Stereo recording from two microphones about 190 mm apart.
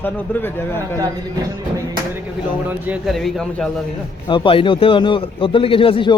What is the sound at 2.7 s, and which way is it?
A man's voice, 5° right (ahead or behind).